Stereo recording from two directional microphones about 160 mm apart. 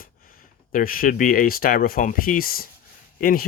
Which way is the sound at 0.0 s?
60° left (ahead or behind).